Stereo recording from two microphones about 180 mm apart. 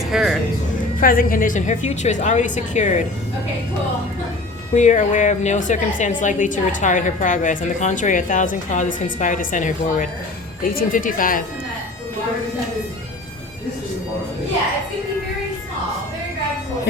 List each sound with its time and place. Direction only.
0.1 s music: 5° right (ahead or behind)
0.9 s a woman's voice: 50° left (ahead or behind)
4.7 s a woman's voice: 45° left (ahead or behind)